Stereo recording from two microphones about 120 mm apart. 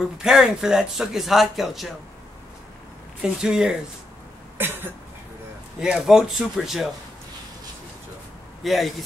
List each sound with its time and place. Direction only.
0.0 s speech: 5° right (ahead or behind)
3.2 s speech: 5° right (ahead or behind)
4.6 s cough: 20° right (ahead or behind)
5.8 s speech: 5° right (ahead or behind)
8.6 s speech: centre (ahead or behind)